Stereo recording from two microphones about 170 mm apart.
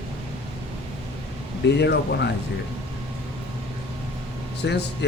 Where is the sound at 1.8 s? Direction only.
85° left.